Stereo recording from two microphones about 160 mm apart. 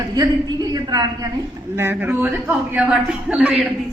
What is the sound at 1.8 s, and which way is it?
A man's voice, 10° right (ahead or behind).